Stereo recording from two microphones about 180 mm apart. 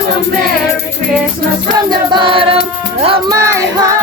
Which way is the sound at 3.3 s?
15° right (ahead or behind).